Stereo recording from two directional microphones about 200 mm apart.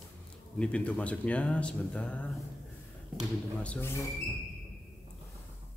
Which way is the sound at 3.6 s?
10° left (ahead or behind).